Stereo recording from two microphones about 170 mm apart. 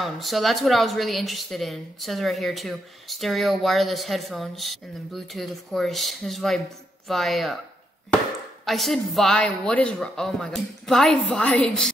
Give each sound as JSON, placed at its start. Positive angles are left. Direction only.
{"t": 0.0, "sound": "speech", "side_deg": 0}
{"t": 8.6, "sound": "speech", "side_deg": 0}